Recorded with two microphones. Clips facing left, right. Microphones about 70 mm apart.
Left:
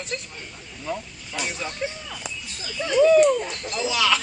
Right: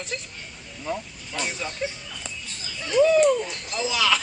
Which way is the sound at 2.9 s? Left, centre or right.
Centre.